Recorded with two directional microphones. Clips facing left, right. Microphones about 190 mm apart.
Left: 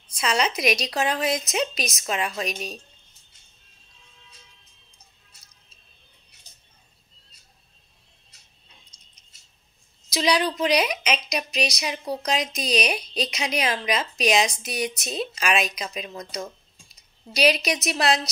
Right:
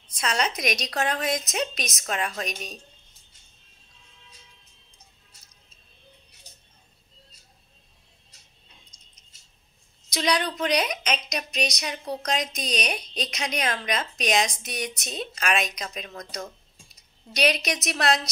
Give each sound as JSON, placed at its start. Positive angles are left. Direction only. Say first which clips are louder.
{"t": 0.2, "sound": "a woman's voice", "louder": "left 3 dB", "side_deg": 5}
{"t": 8.9, "sound": "a sound", "louder": "right 1 dB", "side_deg": -15}
{"t": 10.1, "sound": "a woman's voice", "louder": "left 3 dB", "side_deg": 5}
{"t": 17.3, "sound": "a woman's voice", "louder": "left 3 dB", "side_deg": 5}